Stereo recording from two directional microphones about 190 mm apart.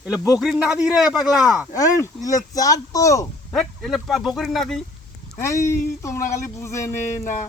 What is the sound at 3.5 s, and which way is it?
Speech, centre (ahead or behind).